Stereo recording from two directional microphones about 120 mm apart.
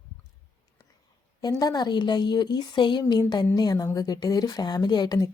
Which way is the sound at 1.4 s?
30° left (ahead or behind).